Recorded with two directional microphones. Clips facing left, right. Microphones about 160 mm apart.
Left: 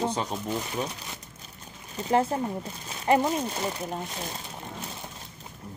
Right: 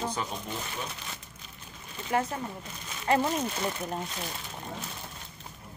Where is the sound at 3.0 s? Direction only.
15° left (ahead or behind).